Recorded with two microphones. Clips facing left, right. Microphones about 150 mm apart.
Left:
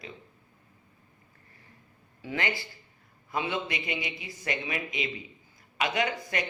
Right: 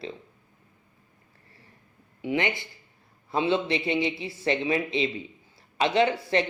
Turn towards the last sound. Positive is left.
turn(degrees=-30)  # may be behind; listen again after turning